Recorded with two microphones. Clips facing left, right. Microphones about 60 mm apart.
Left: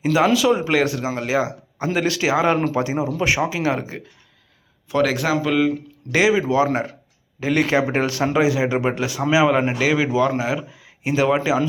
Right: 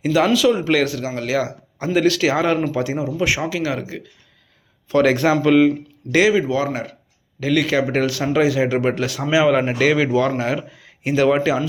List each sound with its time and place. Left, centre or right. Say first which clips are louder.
0.0 s a man's voice: right 1 dB; left
5.0 s speech: right 6 dB; centre
6.1 s a man's voice: right 2 dB; centre
7.3 s a man's voice: even; left